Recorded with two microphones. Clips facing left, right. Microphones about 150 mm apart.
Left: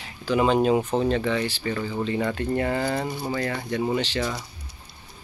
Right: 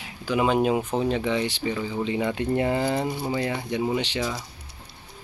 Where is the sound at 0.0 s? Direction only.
10° right (ahead or behind).